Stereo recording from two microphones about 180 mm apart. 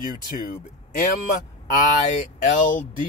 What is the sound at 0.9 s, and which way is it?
Speech, 50° left (ahead or behind).